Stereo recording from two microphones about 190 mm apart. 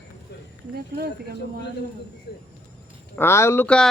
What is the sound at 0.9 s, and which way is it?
Speech, 55° right (ahead or behind).